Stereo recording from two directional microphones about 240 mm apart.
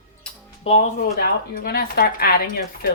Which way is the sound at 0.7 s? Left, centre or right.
Left.